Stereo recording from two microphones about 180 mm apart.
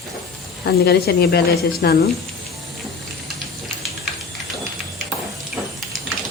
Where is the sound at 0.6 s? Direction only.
65° left (ahead or behind).